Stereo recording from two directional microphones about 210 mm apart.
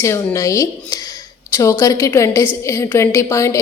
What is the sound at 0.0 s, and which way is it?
Speech, 15° left (ahead or behind).